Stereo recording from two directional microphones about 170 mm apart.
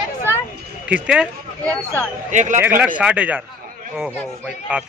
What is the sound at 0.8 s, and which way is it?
Speech, 5° right (ahead or behind).